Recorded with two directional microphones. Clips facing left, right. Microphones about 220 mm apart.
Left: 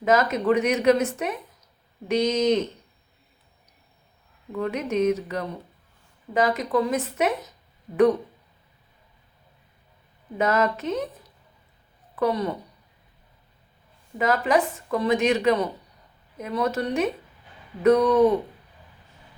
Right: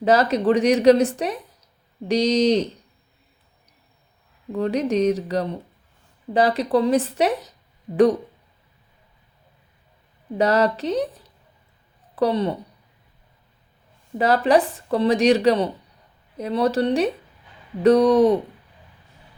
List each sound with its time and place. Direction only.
0.0 s a woman's voice: 35° right (ahead or behind)
4.5 s a woman's voice: 35° right (ahead or behind)
10.3 s a woman's voice: 35° right (ahead or behind)
12.1 s a woman's voice: 30° right (ahead or behind)
14.2 s a woman's voice: 35° right (ahead or behind)